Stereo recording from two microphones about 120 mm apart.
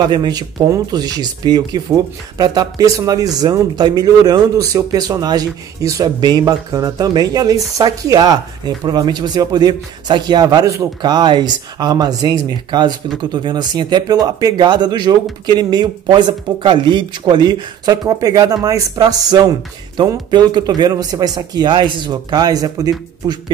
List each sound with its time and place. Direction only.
0.0 s speech: 35° right (ahead or behind)